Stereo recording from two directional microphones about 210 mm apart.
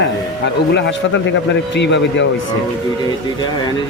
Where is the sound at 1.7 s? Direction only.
55° left (ahead or behind).